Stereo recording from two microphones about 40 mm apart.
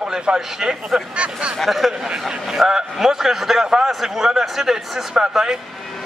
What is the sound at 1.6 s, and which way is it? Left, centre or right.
Speech, centre.